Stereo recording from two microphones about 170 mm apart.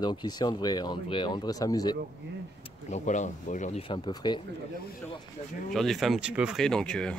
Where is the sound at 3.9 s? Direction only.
25° left (ahead or behind).